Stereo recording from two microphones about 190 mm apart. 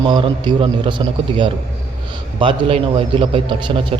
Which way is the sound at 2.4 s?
25° right (ahead or behind).